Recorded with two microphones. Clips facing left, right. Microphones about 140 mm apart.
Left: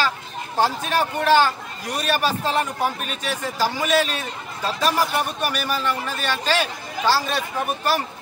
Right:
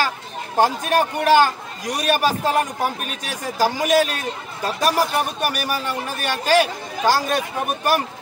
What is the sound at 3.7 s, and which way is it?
Speech, 45° right (ahead or behind).